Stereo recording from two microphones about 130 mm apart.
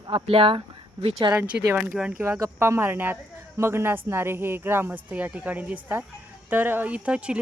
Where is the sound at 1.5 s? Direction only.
10° right (ahead or behind).